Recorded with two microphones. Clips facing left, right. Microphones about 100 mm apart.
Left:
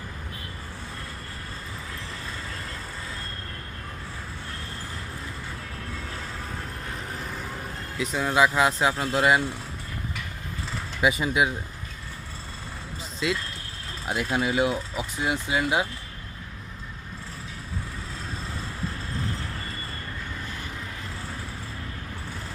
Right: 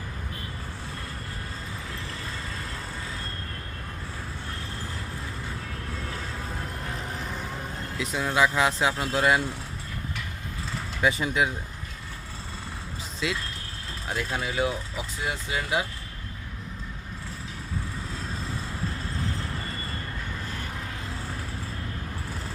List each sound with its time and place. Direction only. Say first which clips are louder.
7.9 s speech: left 2 dB; centre (ahead or behind)
11.0 s speech: left 2 dB; 5° left (ahead or behind)
13.2 s speech: left 3 dB; centre (ahead or behind)
14.1 s speech: left 5 dB; 15° left (ahead or behind)